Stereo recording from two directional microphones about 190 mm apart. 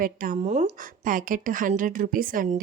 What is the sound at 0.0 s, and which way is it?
A woman's voice, 45° right (ahead or behind).